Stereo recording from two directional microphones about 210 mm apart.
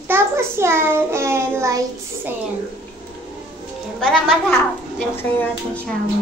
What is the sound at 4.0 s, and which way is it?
Speech, 5° left (ahead or behind).